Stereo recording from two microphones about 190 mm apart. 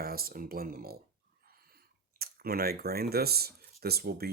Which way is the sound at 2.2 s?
55° right (ahead or behind).